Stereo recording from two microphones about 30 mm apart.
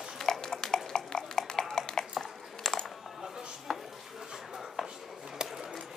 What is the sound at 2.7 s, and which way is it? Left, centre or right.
Typing, centre.